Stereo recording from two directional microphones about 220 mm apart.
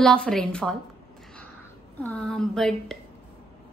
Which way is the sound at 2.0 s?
5° left (ahead or behind).